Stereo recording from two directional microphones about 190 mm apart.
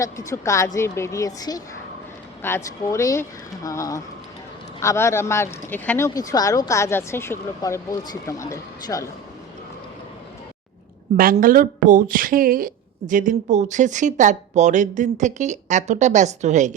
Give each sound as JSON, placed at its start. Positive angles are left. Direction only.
{"t": 0.0, "sound": "a woman's voice", "side_deg": 15}
{"t": 11.2, "sound": "speech", "side_deg": -45}